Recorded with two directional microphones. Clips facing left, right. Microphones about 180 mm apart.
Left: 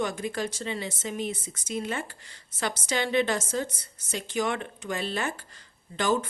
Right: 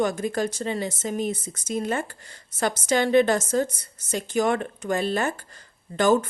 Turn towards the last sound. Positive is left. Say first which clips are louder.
# right 6 dB
turn(degrees=-45)  # may be behind; listen again after turning